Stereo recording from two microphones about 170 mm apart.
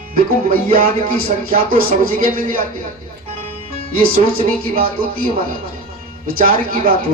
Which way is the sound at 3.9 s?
55° right (ahead or behind).